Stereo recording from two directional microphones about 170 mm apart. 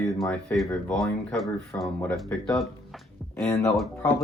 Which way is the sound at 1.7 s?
10° left (ahead or behind).